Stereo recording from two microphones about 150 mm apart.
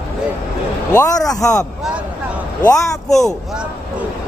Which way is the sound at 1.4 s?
5° left (ahead or behind).